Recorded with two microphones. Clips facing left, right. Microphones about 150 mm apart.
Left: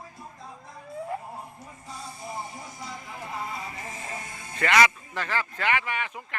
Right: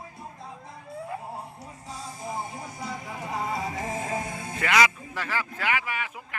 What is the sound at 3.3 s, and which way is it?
Music, 85° right.